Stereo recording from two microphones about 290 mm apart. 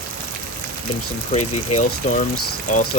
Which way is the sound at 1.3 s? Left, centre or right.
Left.